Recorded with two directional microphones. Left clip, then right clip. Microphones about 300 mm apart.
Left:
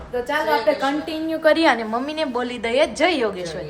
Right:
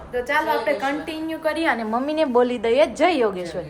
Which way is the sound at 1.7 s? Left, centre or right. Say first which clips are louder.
Even; centre.